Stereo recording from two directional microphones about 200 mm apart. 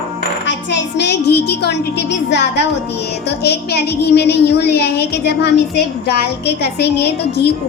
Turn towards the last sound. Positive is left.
turn(degrees=55)  # may be behind; listen again after turning